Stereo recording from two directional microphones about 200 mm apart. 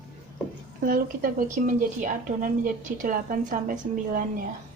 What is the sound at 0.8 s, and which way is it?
A woman's voice, 45° right (ahead or behind).